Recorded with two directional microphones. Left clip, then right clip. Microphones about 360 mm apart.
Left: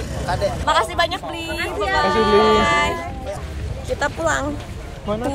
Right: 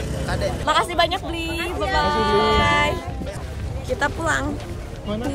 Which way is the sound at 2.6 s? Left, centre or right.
Centre.